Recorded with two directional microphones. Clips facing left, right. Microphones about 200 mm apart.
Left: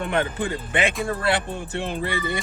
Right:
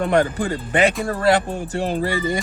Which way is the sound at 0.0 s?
40° right (ahead or behind).